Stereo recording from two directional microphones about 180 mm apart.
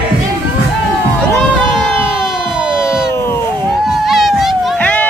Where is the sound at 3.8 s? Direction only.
Centre (ahead or behind).